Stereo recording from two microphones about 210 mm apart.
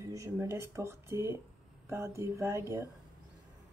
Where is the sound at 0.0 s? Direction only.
15° right (ahead or behind).